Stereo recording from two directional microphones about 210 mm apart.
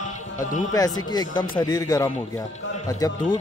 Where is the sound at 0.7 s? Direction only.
20° left (ahead or behind).